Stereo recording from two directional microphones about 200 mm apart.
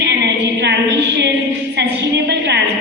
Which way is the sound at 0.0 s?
55° right (ahead or behind).